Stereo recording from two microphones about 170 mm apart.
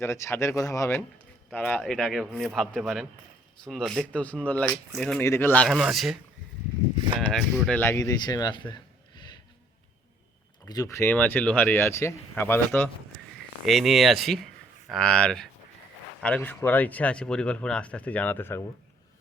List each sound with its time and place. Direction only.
0.0 s speech: 15° left (ahead or behind)
5.6 s speech: centre (ahead or behind)
7.2 s speech: centre (ahead or behind)
7.8 s a man's voice: 15° left (ahead or behind)
10.7 s speech: 20° left (ahead or behind)
13.7 s speech: centre (ahead or behind)